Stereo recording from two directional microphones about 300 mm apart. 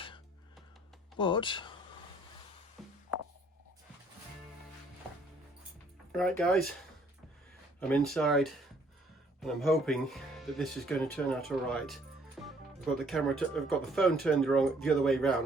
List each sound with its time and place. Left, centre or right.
1.2 s speech: centre
2.8 s music: centre
6.1 s speech: centre
7.8 s speech: centre
12.4 s music: centre
12.8 s speech: centre